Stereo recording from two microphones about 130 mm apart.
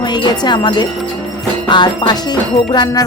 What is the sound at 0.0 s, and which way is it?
Speech, 35° left (ahead or behind).